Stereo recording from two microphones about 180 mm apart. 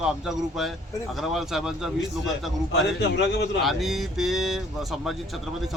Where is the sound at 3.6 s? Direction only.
Centre (ahead or behind).